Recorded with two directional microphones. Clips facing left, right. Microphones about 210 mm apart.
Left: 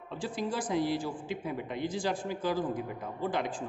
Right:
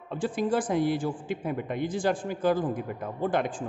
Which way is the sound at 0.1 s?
50° right (ahead or behind).